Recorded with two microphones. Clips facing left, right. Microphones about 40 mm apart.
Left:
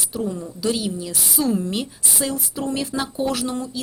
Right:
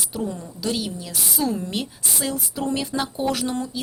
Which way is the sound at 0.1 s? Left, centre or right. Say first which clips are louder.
Left 4 dB; centre.